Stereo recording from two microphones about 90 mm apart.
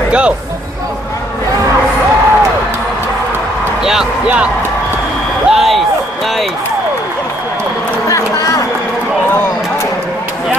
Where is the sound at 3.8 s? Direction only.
5° right (ahead or behind).